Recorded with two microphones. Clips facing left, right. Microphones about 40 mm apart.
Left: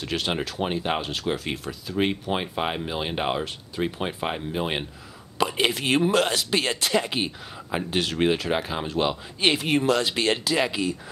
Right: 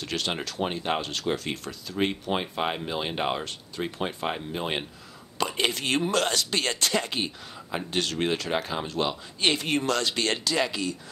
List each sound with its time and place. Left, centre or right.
0.0 s speech: centre